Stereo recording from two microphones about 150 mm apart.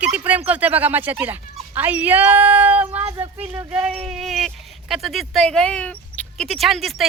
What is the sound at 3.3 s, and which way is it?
Speech, 40° right (ahead or behind).